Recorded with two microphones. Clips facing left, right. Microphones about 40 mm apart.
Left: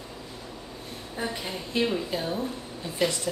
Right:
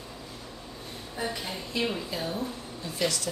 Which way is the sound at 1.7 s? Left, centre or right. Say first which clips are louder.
Left 4 dB; left.